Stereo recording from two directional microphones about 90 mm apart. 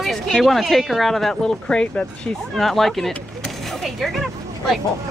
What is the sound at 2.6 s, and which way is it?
Speech, centre (ahead or behind).